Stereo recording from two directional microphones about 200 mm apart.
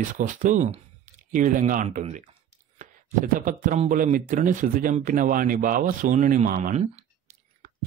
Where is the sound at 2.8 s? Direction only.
40° right (ahead or behind).